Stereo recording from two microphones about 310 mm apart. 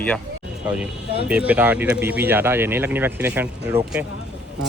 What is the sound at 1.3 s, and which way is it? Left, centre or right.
Speech, centre.